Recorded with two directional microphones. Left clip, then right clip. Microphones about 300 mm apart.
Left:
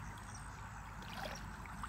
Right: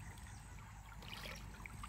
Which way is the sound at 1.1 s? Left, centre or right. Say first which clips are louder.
Left 4 dB; centre.